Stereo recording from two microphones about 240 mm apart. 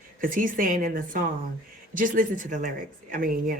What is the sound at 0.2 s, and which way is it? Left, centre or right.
A woman's voice, right.